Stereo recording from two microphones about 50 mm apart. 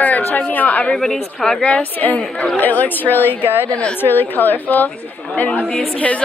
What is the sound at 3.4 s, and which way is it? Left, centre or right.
Speech, right.